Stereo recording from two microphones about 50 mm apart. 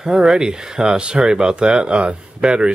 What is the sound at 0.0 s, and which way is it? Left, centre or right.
Speech, centre.